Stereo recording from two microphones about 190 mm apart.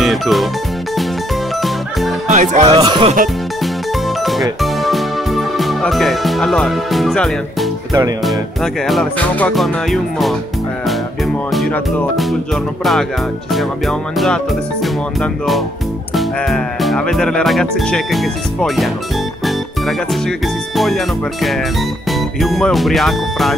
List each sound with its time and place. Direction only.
0.0 s music: centre (ahead or behind)
1.6 s music: centre (ahead or behind)
2.2 s speech: 40° right (ahead or behind)
2.7 s music: 25° right (ahead or behind)
4.2 s music: centre (ahead or behind)
8.8 s speech: 5° left (ahead or behind)
11.5 s speech: centre (ahead or behind)
13.5 s speech: centre (ahead or behind)
16.2 s speech: centre (ahead or behind)
20.2 s speech: centre (ahead or behind)